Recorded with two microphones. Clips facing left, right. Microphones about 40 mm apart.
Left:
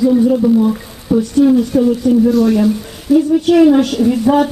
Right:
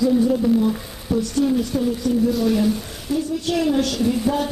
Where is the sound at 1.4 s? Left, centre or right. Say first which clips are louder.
Left 10 dB; left.